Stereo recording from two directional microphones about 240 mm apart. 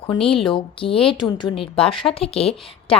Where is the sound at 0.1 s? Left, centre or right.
Left.